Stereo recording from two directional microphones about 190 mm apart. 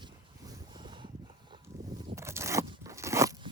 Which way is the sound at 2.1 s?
15° right (ahead or behind).